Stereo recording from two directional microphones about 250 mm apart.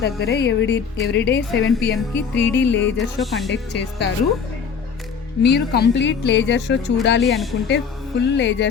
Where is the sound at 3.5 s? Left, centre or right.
Left.